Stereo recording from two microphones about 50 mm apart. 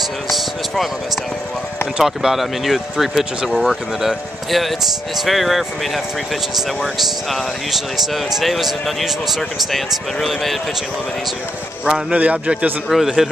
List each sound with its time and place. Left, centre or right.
2.0 s speech: centre
6.8 s speech: centre
11.8 s speech: centre
12.2 s a man's voice: right
12.9 s speech: centre